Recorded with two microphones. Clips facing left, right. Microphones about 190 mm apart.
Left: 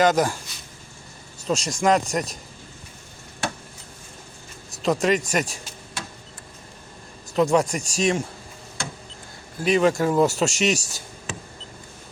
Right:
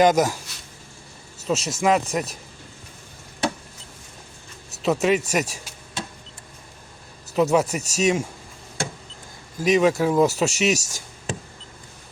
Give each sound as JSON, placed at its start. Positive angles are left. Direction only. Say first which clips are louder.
{"t": 0.0, "sound": "speech", "louder": "right 2 dB", "side_deg": -10}
{"t": 1.5, "sound": "speech", "louder": "even", "side_deg": -5}
{"t": 4.8, "sound": "speech", "louder": "right 1 dB", "side_deg": -5}
{"t": 7.3, "sound": "speech", "louder": "even", "side_deg": -5}
{"t": 9.6, "sound": "speech", "louder": "right 1 dB", "side_deg": -10}
{"t": 10.8, "sound": "a sound", "louder": "even", "side_deg": -45}